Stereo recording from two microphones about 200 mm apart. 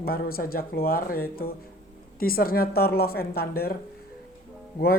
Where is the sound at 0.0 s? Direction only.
50° left (ahead or behind).